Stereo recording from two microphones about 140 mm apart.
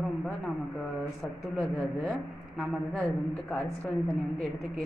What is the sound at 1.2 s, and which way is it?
Speech, centre (ahead or behind).